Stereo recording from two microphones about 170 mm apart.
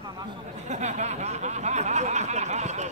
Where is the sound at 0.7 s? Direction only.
45° right (ahead or behind).